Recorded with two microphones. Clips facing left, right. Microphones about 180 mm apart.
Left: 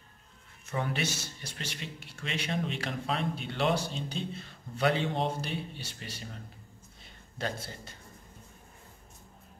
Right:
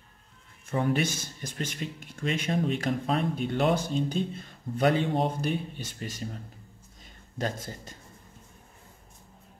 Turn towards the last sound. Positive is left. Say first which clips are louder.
# right 3 dB
turn(degrees=-45)  # may be behind; listen again after turning